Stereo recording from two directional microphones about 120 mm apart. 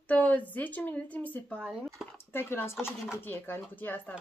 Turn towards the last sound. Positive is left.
turn(degrees=15)  # may be behind; listen again after turning